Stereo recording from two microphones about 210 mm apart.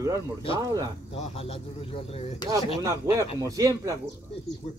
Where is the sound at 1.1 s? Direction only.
25° left (ahead or behind).